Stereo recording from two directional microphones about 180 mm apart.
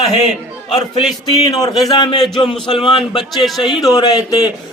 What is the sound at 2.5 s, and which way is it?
Speech, centre (ahead or behind).